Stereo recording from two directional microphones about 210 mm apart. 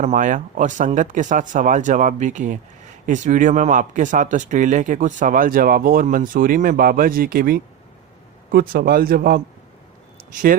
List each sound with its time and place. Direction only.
0.0 s speech: 35° right (ahead or behind)